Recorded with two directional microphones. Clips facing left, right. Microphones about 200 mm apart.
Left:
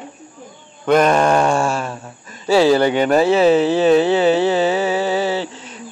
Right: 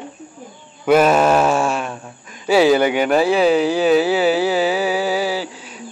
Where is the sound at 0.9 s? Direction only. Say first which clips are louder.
Right 1 dB; 5° right (ahead or behind).